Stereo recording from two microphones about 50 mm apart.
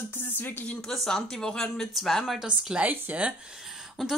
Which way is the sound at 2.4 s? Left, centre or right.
Right.